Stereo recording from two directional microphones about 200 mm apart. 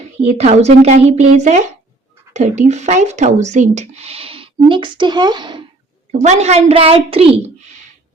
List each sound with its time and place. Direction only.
0.3 s speech: 35° right (ahead or behind)
6.1 s speech: 35° right (ahead or behind)